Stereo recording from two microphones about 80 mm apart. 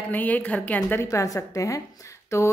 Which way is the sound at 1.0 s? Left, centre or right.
Left.